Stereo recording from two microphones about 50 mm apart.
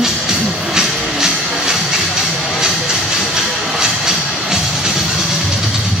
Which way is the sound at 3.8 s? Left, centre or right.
Centre.